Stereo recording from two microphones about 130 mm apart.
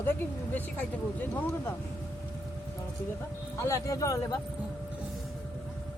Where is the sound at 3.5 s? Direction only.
25° left (ahead or behind).